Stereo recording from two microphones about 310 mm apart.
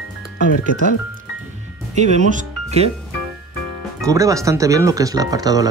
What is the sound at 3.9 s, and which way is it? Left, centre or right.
Speech, centre.